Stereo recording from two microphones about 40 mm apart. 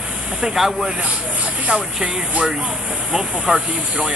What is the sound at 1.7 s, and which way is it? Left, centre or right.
Speech, right.